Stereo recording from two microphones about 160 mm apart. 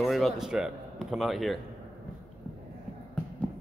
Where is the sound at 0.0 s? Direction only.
Centre (ahead or behind).